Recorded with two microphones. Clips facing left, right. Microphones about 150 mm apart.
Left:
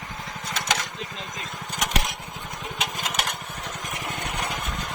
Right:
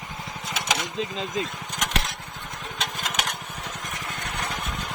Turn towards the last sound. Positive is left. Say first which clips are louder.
# left 1 dB
turn(degrees=0)  # may be behind; listen again after turning